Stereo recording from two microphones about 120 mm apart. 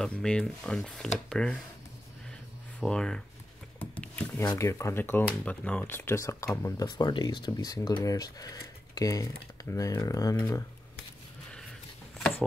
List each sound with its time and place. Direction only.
0.0 s speech: 5° left (ahead or behind)
2.8 s speech: 5° left (ahead or behind)
3.8 s a sound: 15° left (ahead or behind)
4.6 s speech: 25° left (ahead or behind)
6.8 s speech: 35° left (ahead or behind)